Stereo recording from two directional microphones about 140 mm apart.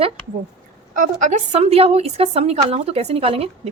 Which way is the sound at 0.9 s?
70° right (ahead or behind).